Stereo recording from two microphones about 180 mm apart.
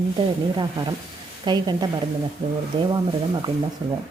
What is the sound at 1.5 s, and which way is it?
A woman's voice, 25° right (ahead or behind).